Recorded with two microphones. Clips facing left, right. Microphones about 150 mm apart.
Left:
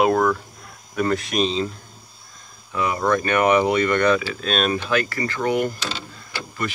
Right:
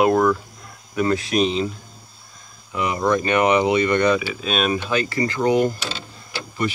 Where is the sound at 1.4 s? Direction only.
15° right (ahead or behind).